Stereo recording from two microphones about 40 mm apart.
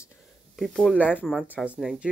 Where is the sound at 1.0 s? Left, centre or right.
Left.